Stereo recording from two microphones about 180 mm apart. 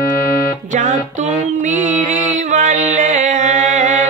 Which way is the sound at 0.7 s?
45° right (ahead or behind).